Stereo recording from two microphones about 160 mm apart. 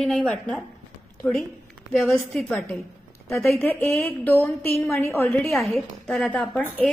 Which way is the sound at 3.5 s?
15° left (ahead or behind).